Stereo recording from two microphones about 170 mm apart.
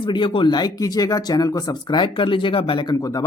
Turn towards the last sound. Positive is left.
turn(degrees=25)  # may be behind; listen again after turning